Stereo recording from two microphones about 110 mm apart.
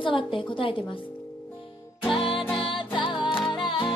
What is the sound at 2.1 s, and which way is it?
Music, 50° left (ahead or behind).